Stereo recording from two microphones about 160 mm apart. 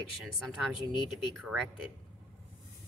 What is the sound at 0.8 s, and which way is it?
Speech, 30° left (ahead or behind).